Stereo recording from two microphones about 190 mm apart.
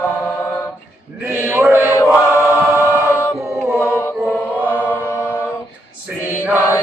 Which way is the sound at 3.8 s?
15° left (ahead or behind).